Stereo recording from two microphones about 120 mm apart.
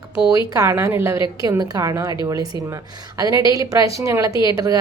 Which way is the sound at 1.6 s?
30° right (ahead or behind).